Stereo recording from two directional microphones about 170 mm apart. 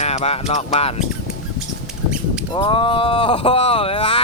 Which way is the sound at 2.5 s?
30° left (ahead or behind).